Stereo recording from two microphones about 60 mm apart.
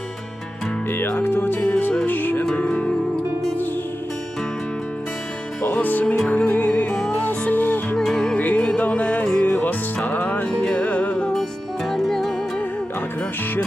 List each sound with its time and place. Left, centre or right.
0.9 s music: left
2.6 s music: left
5.7 s music: left
7.9 s music: centre
8.4 s music: left
9.2 s music: centre
9.6 s music: left
11.9 s music: centre